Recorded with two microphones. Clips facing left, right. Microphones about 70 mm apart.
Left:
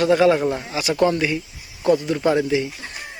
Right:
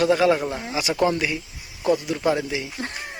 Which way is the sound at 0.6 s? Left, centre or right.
Centre.